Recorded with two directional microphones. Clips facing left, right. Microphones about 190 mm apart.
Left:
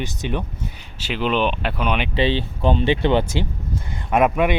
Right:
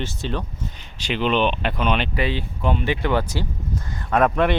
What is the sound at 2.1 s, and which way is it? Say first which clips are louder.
Speech: left 4 dB; 30° left (ahead or behind).